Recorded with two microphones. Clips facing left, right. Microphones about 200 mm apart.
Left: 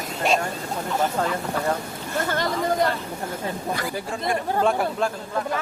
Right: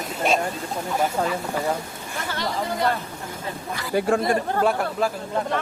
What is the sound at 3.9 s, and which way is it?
Speech, 65° right (ahead or behind).